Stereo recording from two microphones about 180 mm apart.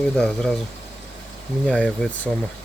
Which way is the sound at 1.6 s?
5° left (ahead or behind).